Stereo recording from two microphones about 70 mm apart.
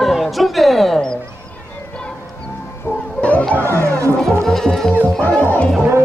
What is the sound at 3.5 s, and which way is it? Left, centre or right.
Chatter, right.